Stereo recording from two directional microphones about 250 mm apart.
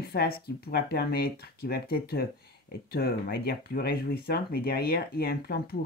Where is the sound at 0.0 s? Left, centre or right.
Left.